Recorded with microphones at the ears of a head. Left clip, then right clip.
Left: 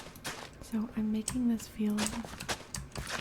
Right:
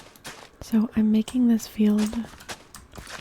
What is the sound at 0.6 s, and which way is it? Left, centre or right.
Speech, right.